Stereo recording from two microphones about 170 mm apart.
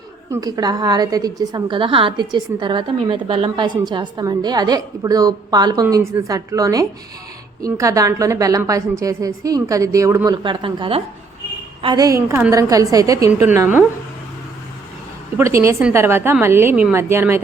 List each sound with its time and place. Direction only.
0.3 s a woman's voice: 20° right (ahead or behind)
10.3 s a woman's voice: 30° right (ahead or behind); by 13.8 s 10° right (ahead or behind)
15.4 s a woman's voice: 15° right (ahead or behind)